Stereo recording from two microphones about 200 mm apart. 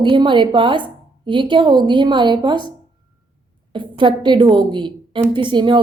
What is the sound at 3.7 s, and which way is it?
A woman's voice, 25° right (ahead or behind).